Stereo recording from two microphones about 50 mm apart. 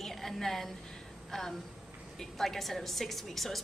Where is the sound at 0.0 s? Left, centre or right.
Centre.